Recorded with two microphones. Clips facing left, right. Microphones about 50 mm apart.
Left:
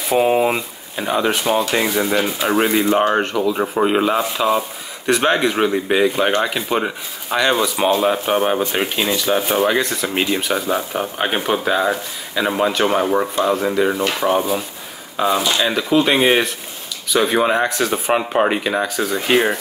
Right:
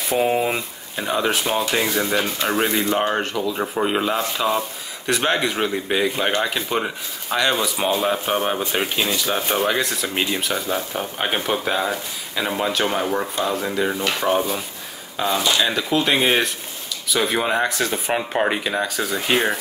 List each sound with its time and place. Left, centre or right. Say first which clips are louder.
0.1 s speech: left 4 dB; left
0.5 s speech: left 4 dB; centre